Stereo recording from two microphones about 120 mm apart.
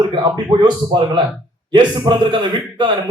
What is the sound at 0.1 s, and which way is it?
A man's voice, 40° right (ahead or behind).